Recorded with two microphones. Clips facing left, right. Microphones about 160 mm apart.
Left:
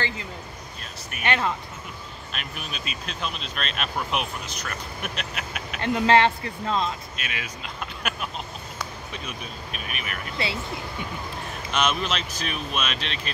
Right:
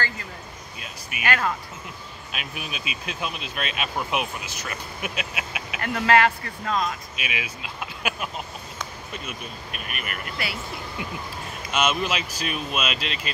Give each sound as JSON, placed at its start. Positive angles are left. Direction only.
{"t": 1.2, "sound": "speech", "side_deg": 25}
{"t": 2.3, "sound": "speech", "side_deg": -5}
{"t": 5.8, "sound": "speech", "side_deg": 25}
{"t": 7.2, "sound": "speech", "side_deg": -10}
{"t": 10.3, "sound": "speech", "side_deg": 25}
{"t": 11.7, "sound": "speech", "side_deg": -5}